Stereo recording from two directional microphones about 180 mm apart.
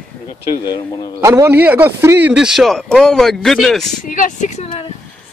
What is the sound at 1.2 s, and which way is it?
A man's voice, 15° right (ahead or behind).